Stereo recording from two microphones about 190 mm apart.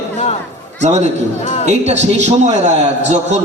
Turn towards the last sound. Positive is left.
turn(degrees=-35)  # may be behind; listen again after turning